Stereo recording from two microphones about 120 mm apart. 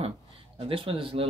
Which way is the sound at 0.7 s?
50° right (ahead or behind).